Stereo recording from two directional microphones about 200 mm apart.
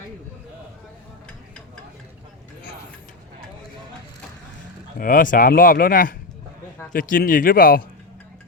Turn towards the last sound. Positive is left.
turn(degrees=45)  # may be behind; listen again after turning